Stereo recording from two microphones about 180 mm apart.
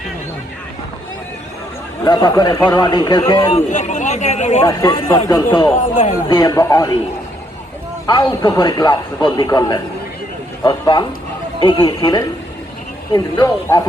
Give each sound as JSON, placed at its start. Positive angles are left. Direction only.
{"t": 2.0, "sound": "a man's voice", "side_deg": 20}
{"t": 3.5, "sound": "speech", "side_deg": 40}
{"t": 4.6, "sound": "a man's voice", "side_deg": 20}
{"t": 5.7, "sound": "speech", "side_deg": 45}
{"t": 6.2, "sound": "a man's voice", "side_deg": 20}
{"t": 8.0, "sound": "a man's voice", "side_deg": 20}